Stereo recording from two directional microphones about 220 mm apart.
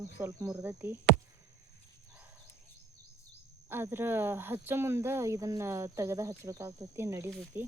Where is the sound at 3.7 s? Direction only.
10° right (ahead or behind).